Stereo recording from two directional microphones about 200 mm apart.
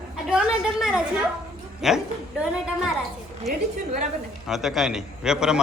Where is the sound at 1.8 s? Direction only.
Centre (ahead or behind).